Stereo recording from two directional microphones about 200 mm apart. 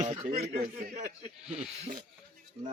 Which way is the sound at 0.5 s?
45° right (ahead or behind).